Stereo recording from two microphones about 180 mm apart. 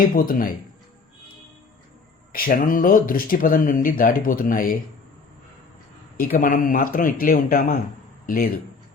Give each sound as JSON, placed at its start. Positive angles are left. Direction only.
{"t": 0.1, "sound": "speech", "side_deg": 50}
{"t": 2.3, "sound": "speech", "side_deg": 50}
{"t": 6.1, "sound": "speech", "side_deg": 55}